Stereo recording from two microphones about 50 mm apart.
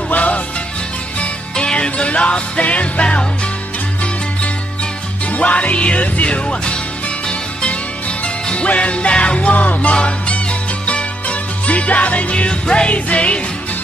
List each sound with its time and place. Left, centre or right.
0.1 s music: left
5.3 s music: left
8.5 s music: left